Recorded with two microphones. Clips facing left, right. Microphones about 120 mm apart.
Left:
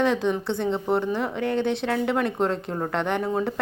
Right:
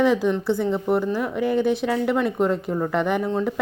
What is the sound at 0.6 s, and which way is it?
Speech, 25° left (ahead or behind).